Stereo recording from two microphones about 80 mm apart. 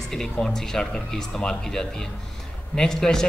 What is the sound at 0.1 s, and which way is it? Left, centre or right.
A man's voice, centre.